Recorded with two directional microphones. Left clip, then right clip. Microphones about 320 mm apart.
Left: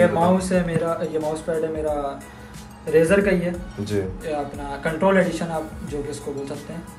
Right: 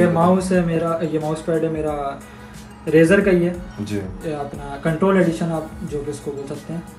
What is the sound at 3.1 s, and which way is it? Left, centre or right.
Speech, centre.